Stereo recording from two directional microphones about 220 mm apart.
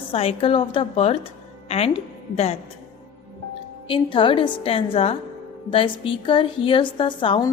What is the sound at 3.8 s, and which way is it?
A woman's voice, 20° left (ahead or behind).